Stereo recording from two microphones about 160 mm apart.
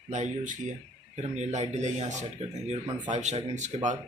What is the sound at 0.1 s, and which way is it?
Speech, 50° right (ahead or behind).